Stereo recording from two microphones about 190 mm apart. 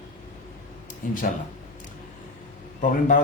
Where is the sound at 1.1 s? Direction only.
45° left (ahead or behind).